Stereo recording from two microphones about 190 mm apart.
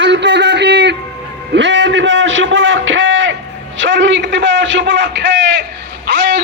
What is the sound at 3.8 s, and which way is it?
A man's voice, 80° right.